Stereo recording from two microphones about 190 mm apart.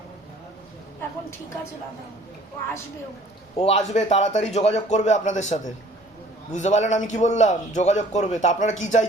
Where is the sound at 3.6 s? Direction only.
35° left (ahead or behind).